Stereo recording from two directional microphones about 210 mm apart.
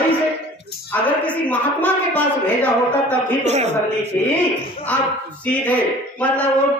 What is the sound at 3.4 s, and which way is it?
Speech, 30° right (ahead or behind).